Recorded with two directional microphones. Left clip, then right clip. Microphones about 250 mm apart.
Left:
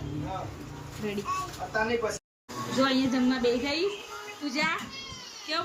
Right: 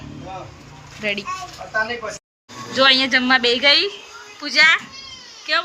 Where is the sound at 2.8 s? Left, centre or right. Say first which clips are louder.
Right 12 dB; centre.